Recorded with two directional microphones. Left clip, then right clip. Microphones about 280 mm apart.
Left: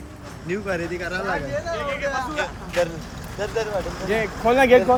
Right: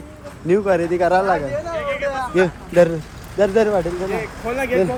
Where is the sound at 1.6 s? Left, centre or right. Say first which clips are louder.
Right 3 dB; right.